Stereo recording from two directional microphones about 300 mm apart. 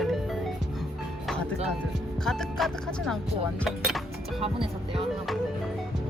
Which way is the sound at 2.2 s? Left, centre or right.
Centre.